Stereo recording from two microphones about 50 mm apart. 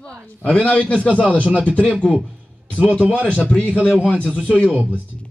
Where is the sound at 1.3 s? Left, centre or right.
Right.